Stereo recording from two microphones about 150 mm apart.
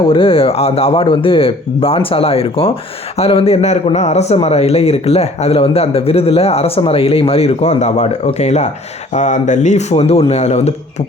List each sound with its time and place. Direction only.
0.0 s a man's voice: 35° left (ahead or behind)